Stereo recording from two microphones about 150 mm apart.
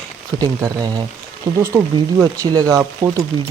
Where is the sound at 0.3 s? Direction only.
25° right (ahead or behind).